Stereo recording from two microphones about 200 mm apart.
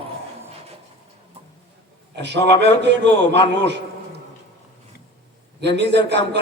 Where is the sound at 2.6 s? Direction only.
60° right (ahead or behind).